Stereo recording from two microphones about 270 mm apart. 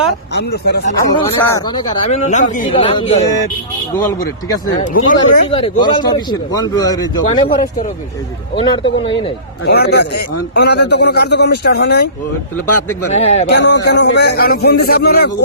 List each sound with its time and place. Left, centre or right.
0.3 s a man's voice: left
1.4 s speech: centre
2.0 s speech: left
5.0 s speech: left
7.4 s a man's voice: left
8.5 s speech: centre
9.6 s a man's voice: left
12.6 s speech: left
13.1 s speech: left
13.5 s a man's voice: left